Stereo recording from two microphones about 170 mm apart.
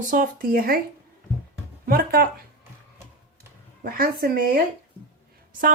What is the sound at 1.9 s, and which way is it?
Speech, 60° right (ahead or behind).